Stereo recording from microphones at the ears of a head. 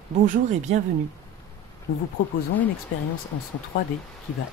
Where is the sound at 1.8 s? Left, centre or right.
Left.